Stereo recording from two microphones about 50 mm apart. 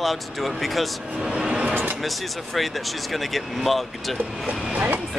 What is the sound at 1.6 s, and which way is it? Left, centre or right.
Speech, right.